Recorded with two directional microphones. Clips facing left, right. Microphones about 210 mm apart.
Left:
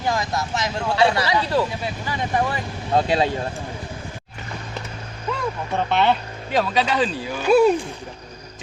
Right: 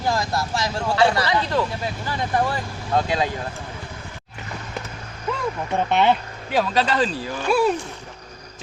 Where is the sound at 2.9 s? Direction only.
25° left (ahead or behind).